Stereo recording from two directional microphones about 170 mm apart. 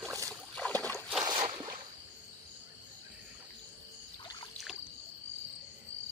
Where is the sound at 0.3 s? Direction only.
5° left (ahead or behind).